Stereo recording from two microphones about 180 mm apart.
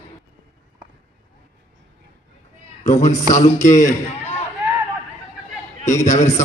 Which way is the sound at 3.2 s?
40° left (ahead or behind).